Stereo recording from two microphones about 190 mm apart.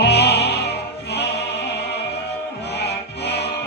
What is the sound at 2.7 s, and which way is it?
Music, 60° left (ahead or behind).